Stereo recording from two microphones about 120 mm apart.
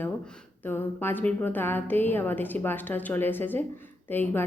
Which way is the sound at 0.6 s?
15° left (ahead or behind).